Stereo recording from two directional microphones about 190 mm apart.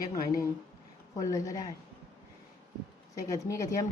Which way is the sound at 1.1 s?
20° left (ahead or behind).